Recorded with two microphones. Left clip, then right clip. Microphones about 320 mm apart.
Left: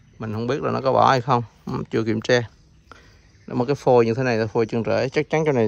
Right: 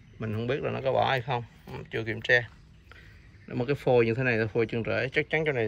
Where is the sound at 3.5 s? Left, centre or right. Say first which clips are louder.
Left 7 dB; centre.